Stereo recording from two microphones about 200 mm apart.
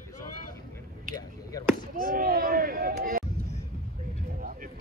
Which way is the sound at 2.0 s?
50° right (ahead or behind).